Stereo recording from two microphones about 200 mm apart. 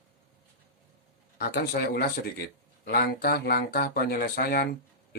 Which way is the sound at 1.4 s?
50° left (ahead or behind).